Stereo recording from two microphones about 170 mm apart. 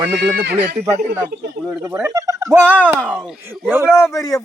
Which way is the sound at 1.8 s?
15° right (ahead or behind).